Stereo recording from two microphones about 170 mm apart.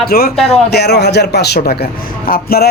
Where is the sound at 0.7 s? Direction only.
75° left (ahead or behind).